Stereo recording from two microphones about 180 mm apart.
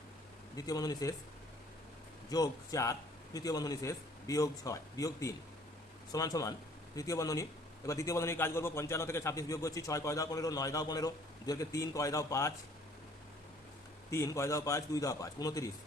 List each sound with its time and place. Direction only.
0.5 s a man's voice: 20° left (ahead or behind)
2.3 s a man's voice: 20° left (ahead or behind)
14.1 s a man's voice: 15° left (ahead or behind)